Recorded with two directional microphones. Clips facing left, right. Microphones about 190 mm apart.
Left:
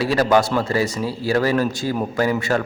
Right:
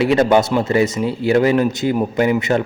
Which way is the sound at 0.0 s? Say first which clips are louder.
Right 3 dB; 25° right (ahead or behind).